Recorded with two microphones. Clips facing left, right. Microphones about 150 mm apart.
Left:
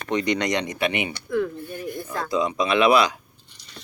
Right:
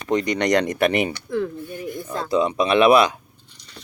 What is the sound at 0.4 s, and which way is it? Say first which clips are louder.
Speech: right 6 dB; 45° right (ahead or behind).